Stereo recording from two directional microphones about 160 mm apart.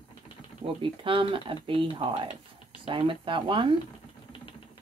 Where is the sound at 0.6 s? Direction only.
35° right (ahead or behind).